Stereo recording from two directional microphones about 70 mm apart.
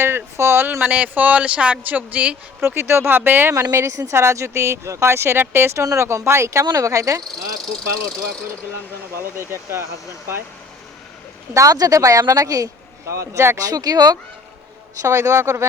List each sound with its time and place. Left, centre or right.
0.0 s speech: right
2.6 s speech: right
3.5 s speech: right
6.7 s speech: right
9.4 s speech: right
11.5 s speech: right
13.6 s speech: right
15.0 s speech: right